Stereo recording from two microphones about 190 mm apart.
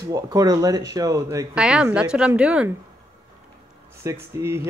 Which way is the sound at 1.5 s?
5° right (ahead or behind).